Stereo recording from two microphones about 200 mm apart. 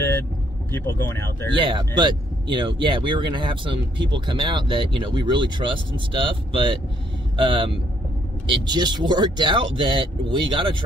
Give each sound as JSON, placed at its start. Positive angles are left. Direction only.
{"t": 0.7, "sound": "speech", "side_deg": 10}
{"t": 1.6, "sound": "speech", "side_deg": -25}